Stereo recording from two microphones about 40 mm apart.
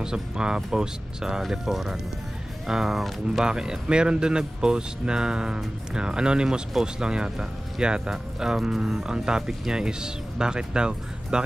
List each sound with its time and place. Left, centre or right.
0.0 s speech: centre
3.4 s speech: centre